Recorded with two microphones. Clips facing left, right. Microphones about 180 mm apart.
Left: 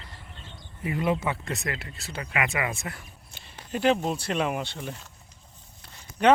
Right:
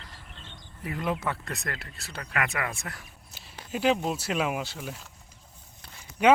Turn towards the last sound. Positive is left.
turn(degrees=-10)  # may be behind; listen again after turning